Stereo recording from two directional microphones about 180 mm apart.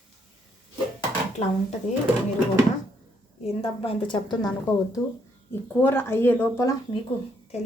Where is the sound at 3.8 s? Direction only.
30° left (ahead or behind).